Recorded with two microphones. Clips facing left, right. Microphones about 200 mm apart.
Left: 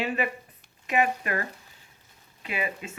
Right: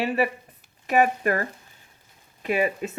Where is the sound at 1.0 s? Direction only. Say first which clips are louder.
Right 5 dB; 45° right (ahead or behind).